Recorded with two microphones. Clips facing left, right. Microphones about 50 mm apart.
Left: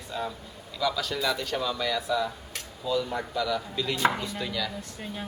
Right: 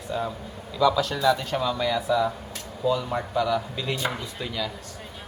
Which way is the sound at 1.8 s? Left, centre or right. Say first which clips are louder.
Right 6 dB; right.